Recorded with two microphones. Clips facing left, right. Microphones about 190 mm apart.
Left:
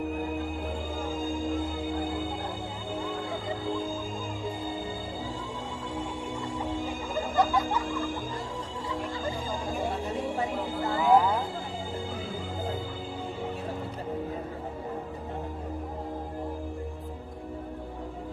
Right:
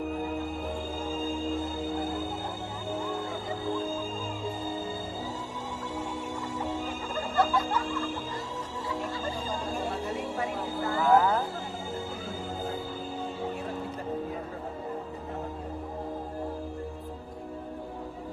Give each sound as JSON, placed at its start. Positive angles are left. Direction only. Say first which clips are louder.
{"t": 1.0, "sound": "music", "louder": "left 1 dB", "side_deg": 15}
{"t": 3.7, "sound": "music", "louder": "right 2 dB", "side_deg": 15}
{"t": 7.3, "sound": "music", "louder": "even", "side_deg": 15}
{"t": 9.2, "sound": "music", "louder": "left 1 dB", "side_deg": 15}
{"t": 10.9, "sound": "a sound", "louder": "even", "side_deg": 15}